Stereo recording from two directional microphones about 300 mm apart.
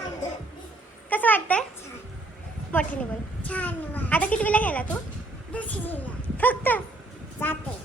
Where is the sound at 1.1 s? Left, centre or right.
Centre.